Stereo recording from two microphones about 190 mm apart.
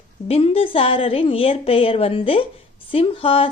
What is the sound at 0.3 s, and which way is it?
A woman's voice, 30° left (ahead or behind).